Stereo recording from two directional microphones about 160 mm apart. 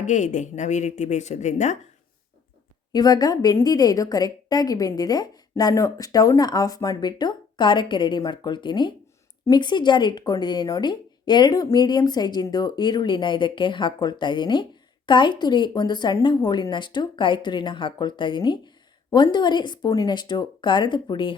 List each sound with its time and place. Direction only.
0.0 s speech: 50° left (ahead or behind)
2.9 s speech: 25° left (ahead or behind)